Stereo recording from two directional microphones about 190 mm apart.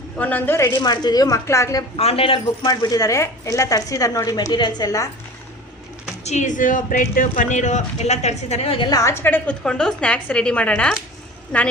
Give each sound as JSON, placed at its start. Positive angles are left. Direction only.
{"t": 0.2, "sound": "a woman's voice", "side_deg": 10}
{"t": 2.0, "sound": "speech", "side_deg": 30}
{"t": 6.2, "sound": "a woman's voice", "side_deg": 40}